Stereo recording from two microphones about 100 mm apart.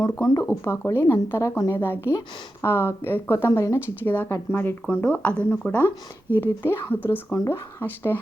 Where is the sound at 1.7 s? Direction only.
20° left (ahead or behind).